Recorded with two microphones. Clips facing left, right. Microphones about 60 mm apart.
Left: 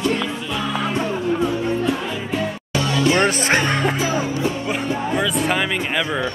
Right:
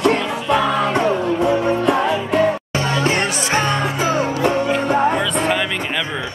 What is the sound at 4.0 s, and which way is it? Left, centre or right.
Music, right.